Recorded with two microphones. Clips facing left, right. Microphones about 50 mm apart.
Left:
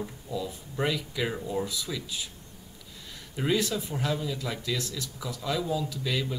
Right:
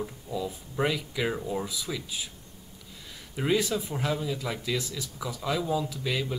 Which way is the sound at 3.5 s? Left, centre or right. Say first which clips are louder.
Right 3 dB; centre.